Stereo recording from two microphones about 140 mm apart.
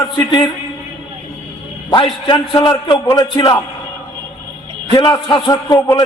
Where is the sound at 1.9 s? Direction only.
35° left (ahead or behind).